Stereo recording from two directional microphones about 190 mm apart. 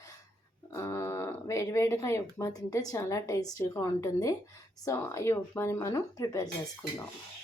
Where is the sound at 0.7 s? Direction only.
15° left (ahead or behind).